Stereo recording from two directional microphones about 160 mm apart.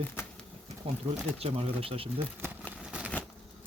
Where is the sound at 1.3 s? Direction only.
35° right (ahead or behind).